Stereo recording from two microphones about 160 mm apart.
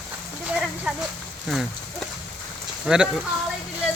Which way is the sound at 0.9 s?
5° right (ahead or behind).